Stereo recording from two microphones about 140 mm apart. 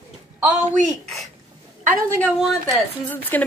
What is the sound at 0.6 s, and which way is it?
Speech, 60° right (ahead or behind).